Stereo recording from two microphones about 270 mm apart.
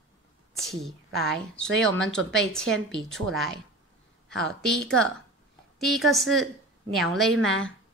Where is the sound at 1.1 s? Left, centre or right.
Right.